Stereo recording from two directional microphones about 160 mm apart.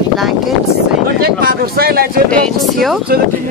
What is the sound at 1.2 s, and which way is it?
Speech, 70° right (ahead or behind).